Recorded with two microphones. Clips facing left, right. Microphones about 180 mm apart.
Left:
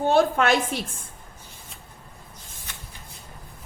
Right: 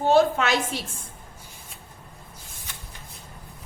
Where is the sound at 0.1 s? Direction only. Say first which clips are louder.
Right 1 dB; 55° left (ahead or behind).